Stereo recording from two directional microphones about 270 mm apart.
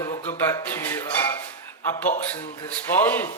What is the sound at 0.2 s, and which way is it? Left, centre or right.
Music, centre.